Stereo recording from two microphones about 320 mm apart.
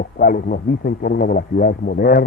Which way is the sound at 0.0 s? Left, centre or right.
Left.